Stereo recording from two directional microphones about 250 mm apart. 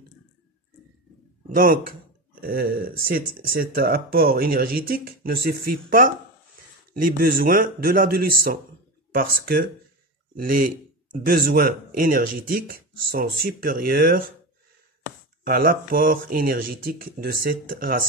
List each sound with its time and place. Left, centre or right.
1.5 s a man's voice: right
15.4 s speech: right